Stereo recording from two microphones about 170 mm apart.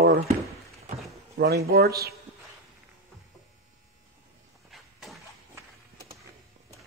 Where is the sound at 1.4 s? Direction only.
70° right (ahead or behind).